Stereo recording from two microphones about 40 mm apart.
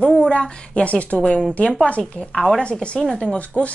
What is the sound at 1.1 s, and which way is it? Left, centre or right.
Speech, left.